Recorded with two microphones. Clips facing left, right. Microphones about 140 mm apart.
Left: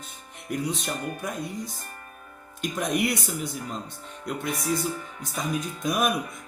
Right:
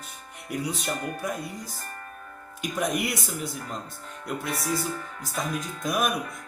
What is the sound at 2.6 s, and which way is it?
Speech, 5° right (ahead or behind).